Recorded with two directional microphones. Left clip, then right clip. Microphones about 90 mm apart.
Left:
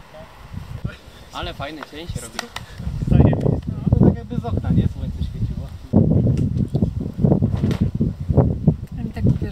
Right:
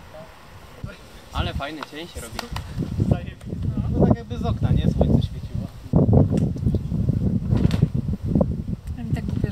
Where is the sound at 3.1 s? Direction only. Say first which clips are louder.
Left 13 dB; 35° left (ahead or behind).